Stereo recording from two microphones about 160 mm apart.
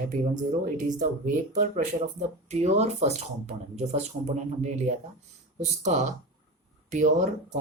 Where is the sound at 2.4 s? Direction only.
45° right (ahead or behind).